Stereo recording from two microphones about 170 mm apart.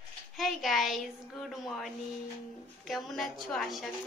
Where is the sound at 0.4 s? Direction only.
Centre (ahead or behind).